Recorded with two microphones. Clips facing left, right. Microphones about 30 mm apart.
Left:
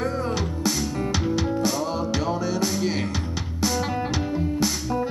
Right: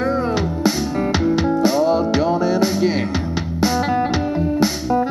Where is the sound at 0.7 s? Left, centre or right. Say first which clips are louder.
Right 6 dB; right.